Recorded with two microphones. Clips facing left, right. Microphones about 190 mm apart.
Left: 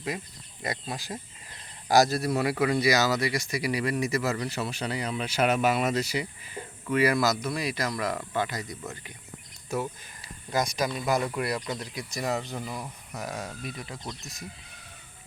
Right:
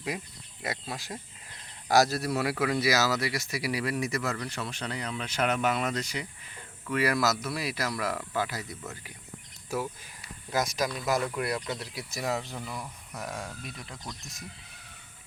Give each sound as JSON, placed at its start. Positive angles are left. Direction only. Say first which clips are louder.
{"t": 0.6, "sound": "a man's voice", "louder": "left 2 dB", "side_deg": 0}